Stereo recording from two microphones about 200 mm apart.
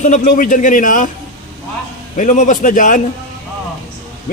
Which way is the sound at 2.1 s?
40° left (ahead or behind).